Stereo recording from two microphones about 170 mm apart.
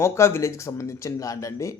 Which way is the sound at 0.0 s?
15° left (ahead or behind).